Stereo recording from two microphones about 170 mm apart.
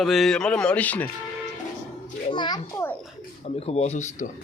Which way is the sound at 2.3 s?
25° left (ahead or behind).